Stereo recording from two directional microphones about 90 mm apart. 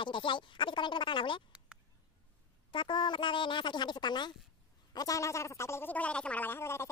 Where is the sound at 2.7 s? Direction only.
60° left (ahead or behind).